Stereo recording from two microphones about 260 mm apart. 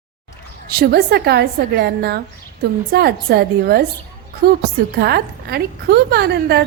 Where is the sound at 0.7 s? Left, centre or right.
Right.